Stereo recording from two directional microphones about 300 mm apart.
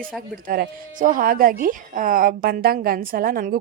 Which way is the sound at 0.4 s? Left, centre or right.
Right.